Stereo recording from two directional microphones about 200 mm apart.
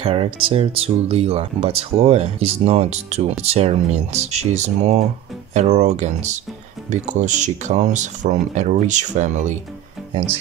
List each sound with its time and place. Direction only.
0.0 s speech: 25° right (ahead or behind)